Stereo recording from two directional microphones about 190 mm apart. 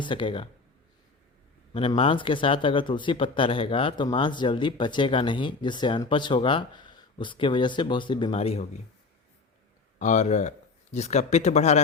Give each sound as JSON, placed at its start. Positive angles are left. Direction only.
{"t": 0.0, "sound": "speech", "side_deg": 25}
{"t": 1.7, "sound": "speech", "side_deg": 30}
{"t": 10.0, "sound": "speech", "side_deg": 40}